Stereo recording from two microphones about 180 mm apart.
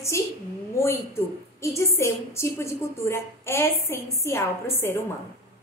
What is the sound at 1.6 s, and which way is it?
A woman's voice, 15° left (ahead or behind).